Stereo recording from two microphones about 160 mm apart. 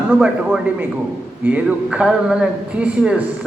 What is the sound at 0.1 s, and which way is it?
Speech, 5° right (ahead or behind).